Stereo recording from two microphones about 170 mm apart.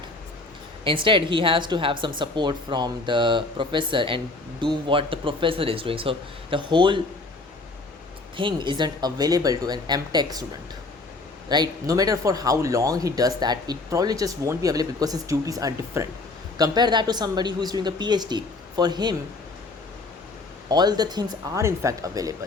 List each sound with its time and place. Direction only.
0.9 s speech: 30° right (ahead or behind)
8.4 s speech: 30° right (ahead or behind)
11.4 s speech: 25° right (ahead or behind)
20.7 s speech: 25° right (ahead or behind)